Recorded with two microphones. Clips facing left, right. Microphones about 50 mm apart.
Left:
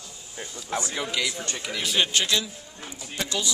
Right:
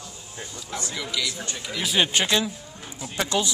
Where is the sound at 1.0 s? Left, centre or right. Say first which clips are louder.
Left 1 dB; left.